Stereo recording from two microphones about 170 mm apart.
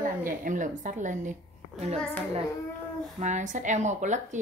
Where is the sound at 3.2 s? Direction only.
45° right (ahead or behind).